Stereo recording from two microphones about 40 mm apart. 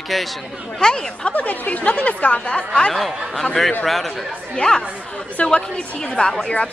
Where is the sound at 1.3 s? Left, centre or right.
Left.